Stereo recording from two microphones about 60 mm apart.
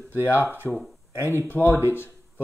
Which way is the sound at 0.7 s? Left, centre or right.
Centre.